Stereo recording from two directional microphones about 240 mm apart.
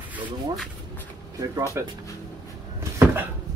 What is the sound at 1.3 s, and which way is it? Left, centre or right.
Speech, centre.